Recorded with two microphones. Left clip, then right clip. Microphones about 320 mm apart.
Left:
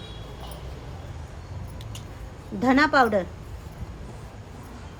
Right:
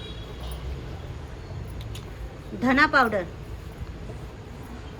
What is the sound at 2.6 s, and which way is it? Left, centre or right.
Speech, left.